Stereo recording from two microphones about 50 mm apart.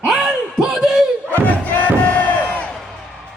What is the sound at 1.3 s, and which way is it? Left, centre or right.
Crowd, left.